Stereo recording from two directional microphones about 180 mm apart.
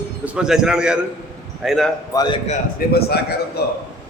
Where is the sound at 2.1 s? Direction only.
20° left (ahead or behind).